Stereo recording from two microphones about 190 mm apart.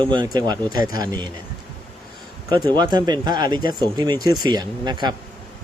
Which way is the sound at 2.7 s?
20° right (ahead or behind).